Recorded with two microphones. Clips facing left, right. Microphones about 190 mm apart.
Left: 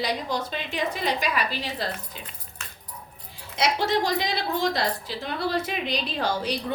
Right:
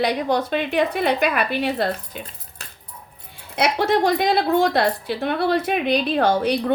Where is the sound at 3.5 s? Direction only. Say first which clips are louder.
Right 5 dB; 55° right (ahead or behind).